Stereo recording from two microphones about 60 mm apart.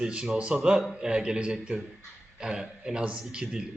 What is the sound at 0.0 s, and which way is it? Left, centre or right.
A man's voice, centre.